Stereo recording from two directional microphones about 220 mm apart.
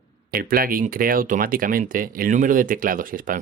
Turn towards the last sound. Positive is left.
turn(degrees=-40)  # may be behind; listen again after turning